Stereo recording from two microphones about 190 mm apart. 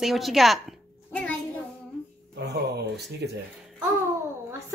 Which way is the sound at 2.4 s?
60° right (ahead or behind).